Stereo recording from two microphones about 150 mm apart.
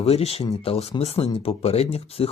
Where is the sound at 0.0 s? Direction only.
40° left (ahead or behind).